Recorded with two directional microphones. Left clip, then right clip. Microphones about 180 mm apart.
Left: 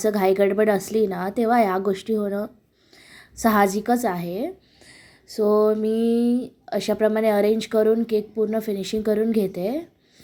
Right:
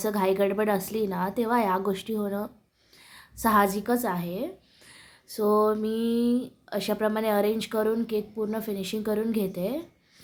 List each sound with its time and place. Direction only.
0.0 s speech: 20° left (ahead or behind)